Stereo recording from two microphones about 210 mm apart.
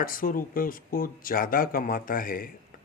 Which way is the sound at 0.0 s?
40° left (ahead or behind).